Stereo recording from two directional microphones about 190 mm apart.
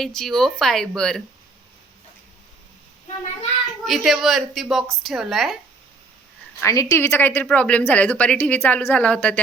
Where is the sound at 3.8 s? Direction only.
Centre (ahead or behind).